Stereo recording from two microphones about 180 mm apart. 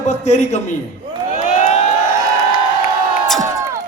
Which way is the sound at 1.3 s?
45° left (ahead or behind).